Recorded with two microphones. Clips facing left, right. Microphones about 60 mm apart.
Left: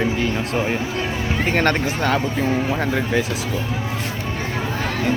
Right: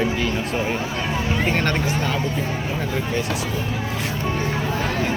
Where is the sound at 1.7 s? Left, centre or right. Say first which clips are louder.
Left 3 dB; left.